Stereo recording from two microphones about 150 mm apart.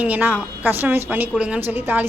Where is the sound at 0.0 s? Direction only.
10° right (ahead or behind).